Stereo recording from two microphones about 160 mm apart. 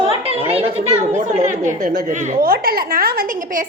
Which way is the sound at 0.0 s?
35° right (ahead or behind).